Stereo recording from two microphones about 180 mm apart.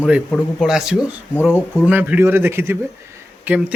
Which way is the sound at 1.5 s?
10° left (ahead or behind).